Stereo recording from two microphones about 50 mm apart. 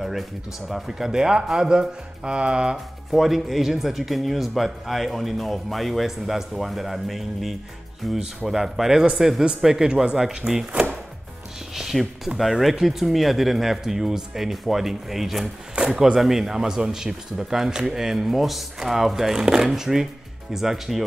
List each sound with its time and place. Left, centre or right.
0.7 s speech: centre
3.1 s speech: centre
11.7 s speech: centre
15.8 s a sound: right
16.2 s speech: centre